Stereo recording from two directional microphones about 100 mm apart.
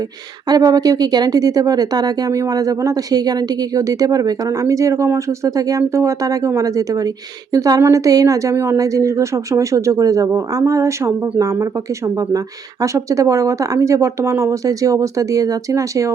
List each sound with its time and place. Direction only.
0.4 s speech: 40° right (ahead or behind)